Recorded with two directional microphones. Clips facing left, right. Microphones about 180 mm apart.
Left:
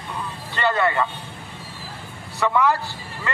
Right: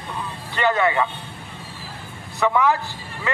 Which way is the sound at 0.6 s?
10° right (ahead or behind).